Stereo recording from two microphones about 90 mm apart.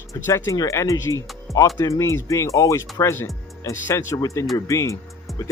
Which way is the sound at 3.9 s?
35° left (ahead or behind).